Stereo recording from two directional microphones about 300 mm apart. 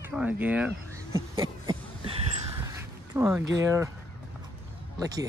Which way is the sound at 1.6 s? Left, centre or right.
Centre.